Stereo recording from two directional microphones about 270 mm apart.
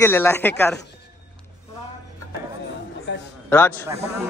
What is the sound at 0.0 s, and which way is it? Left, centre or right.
Speech, centre.